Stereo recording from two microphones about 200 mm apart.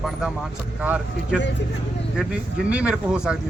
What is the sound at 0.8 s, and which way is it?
Speech, 5° right (ahead or behind).